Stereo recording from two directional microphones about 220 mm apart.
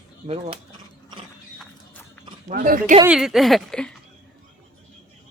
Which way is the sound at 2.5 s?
40° right (ahead or behind).